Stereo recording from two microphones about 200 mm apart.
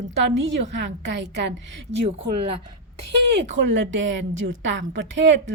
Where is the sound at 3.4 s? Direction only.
60° right (ahead or behind).